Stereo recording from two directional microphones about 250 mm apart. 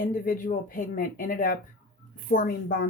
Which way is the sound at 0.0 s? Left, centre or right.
Left.